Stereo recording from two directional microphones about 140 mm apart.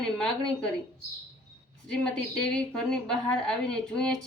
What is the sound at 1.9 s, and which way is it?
A woman's voice, 5° left (ahead or behind).